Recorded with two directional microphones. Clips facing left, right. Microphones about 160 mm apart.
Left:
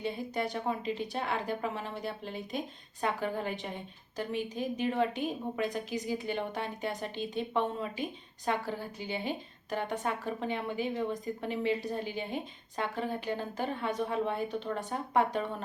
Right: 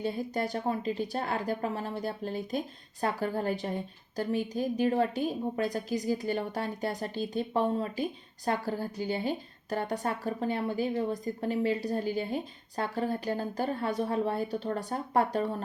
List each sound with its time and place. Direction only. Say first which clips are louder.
0.0 s a woman's voice: right 2 dB; 40° right (ahead or behind)